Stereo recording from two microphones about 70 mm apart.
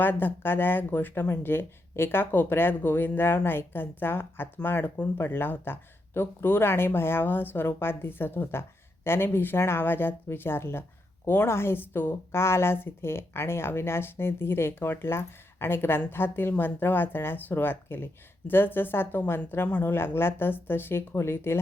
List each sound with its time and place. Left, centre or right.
0.0 s a woman's voice: left